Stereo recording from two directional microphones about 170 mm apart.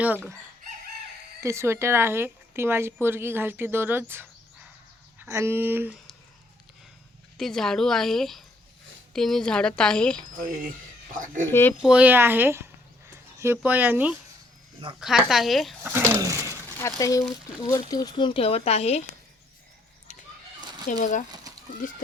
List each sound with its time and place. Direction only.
1.4 s a woman's voice: 15° right (ahead or behind)
7.3 s a woman's voice: centre (ahead or behind)
11.8 s a woman's voice: 5° right (ahead or behind)
13.1 s a sound: 15° right (ahead or behind)
13.6 s a woman's voice: 10° right (ahead or behind)
15.8 s a woman's voice: 15° right (ahead or behind)
16.7 s speech: 20° left (ahead or behind); by 19.0 s 40° left (ahead or behind)
20.6 s fowl: 25° right (ahead or behind)
21.0 s speech: 45° left (ahead or behind)
21.5 s chicken: 20° right (ahead or behind)
21.8 s speech: 50° left (ahead or behind)